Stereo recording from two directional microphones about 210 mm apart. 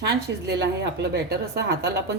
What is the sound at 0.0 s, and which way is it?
A woman's voice, 50° right (ahead or behind).